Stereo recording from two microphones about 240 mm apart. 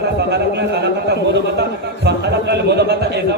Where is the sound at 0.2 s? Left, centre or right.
Right.